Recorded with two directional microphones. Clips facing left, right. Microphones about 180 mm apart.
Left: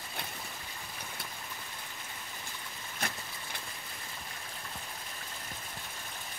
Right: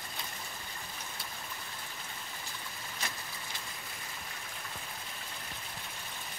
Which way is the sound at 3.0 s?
60° left (ahead or behind).